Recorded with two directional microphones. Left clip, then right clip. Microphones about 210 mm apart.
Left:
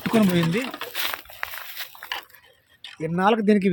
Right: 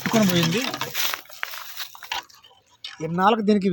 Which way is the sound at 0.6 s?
20° right (ahead or behind).